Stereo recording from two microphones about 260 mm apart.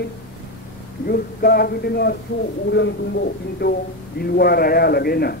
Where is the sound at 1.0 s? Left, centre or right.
Left.